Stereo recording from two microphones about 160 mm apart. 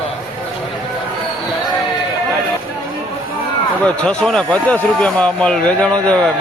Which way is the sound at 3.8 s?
5° left (ahead or behind).